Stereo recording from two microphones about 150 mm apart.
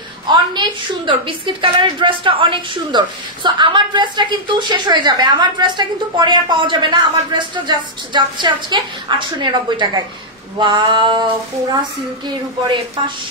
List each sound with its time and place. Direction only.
0.3 s a woman's voice: 30° right (ahead or behind)
12.3 s a woman's voice: 30° right (ahead or behind)